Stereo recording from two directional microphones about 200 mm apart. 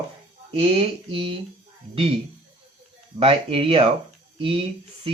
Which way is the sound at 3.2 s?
30° right (ahead or behind).